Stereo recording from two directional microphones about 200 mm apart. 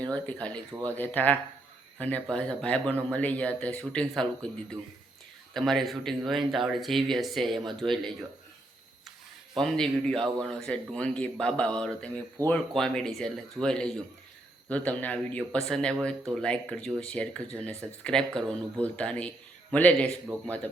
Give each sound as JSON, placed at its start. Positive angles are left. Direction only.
{"t": 0.0, "sound": "speech", "side_deg": 5}
{"t": 5.5, "sound": "speech", "side_deg": 0}
{"t": 9.6, "sound": "speech", "side_deg": 5}
{"t": 20.3, "sound": "speech", "side_deg": -20}